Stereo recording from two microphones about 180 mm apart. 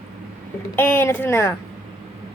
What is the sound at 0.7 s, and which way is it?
Speech, 10° left (ahead or behind).